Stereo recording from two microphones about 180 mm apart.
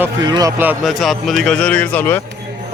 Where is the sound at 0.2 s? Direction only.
20° right (ahead or behind).